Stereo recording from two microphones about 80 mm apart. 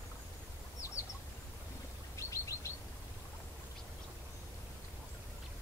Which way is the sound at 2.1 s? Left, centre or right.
Left.